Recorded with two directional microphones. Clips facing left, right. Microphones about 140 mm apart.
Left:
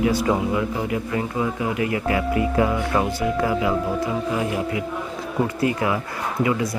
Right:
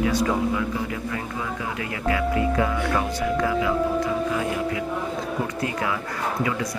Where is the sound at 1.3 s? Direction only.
25° left (ahead or behind).